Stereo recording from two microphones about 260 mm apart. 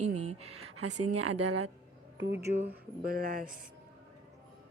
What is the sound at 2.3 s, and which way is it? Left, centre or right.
Speech, centre.